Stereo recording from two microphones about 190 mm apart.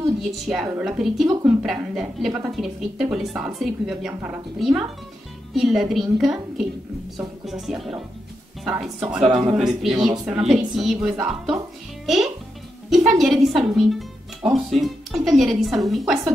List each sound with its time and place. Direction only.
0.2 s speech: centre (ahead or behind)
10.0 s a woman's voice: 20° right (ahead or behind)
10.3 s speech: centre (ahead or behind)
12.9 s speech: centre (ahead or behind)